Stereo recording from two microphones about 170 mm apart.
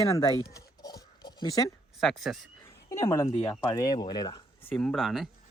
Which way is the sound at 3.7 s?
25° left (ahead or behind).